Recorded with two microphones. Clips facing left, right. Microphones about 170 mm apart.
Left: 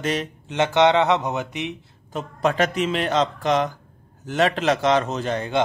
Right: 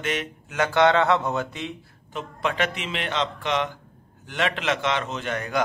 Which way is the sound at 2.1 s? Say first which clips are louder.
Left 5 dB; 40° left (ahead or behind).